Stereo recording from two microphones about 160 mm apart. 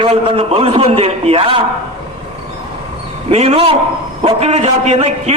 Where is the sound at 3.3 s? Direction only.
40° right (ahead or behind).